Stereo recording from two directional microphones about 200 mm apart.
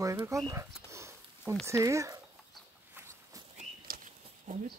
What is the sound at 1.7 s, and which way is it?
Speech, 15° right (ahead or behind).